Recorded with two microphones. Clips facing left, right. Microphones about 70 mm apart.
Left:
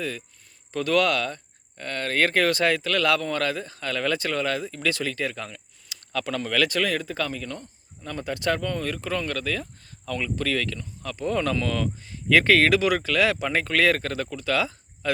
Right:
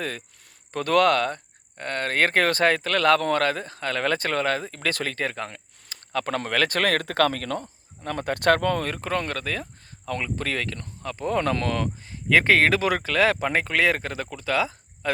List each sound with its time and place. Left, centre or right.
0.7 s speech: right
8.0 s speech: right
8.8 s speech: right